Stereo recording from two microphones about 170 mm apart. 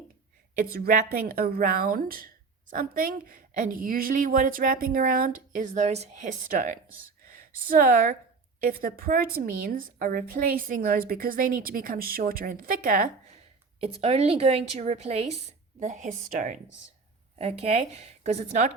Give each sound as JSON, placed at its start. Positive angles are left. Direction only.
{"t": 0.6, "sound": "speech", "side_deg": -60}
{"t": 13.7, "sound": "a woman's voice", "side_deg": -35}
{"t": 17.3, "sound": "a woman's voice", "side_deg": -35}